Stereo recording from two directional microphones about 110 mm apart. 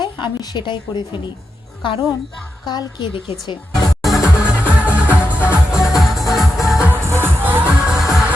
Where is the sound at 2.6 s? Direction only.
40° left (ahead or behind).